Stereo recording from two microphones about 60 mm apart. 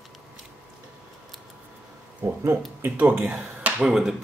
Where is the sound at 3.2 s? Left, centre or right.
Centre.